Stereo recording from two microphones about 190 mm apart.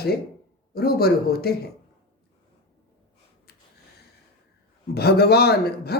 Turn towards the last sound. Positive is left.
turn(degrees=55)  # may be behind; listen again after turning